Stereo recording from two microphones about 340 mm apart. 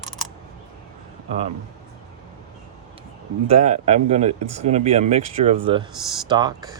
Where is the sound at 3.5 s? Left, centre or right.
Centre.